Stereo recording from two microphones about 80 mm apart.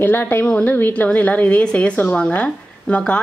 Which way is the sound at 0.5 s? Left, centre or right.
Centre.